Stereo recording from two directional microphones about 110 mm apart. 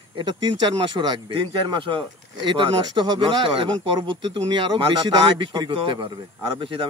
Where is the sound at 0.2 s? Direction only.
45° right (ahead or behind).